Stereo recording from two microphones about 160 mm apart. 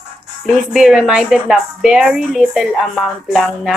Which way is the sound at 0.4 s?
Centre (ahead or behind).